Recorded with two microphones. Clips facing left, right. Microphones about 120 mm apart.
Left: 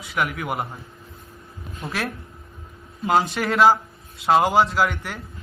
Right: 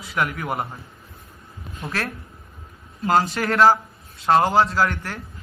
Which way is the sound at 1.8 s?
Centre (ahead or behind).